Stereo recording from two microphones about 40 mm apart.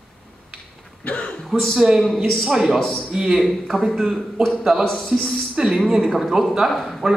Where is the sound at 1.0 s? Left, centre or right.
Left.